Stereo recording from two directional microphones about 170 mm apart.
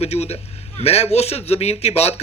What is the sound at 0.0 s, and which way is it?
A man's voice, 40° left (ahead or behind).